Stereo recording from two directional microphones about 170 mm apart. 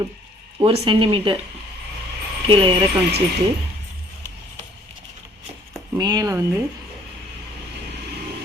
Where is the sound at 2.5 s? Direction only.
30° right (ahead or behind).